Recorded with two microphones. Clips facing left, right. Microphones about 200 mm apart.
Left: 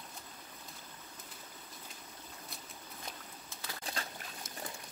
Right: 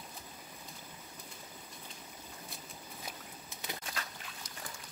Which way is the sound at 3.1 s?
20° right (ahead or behind).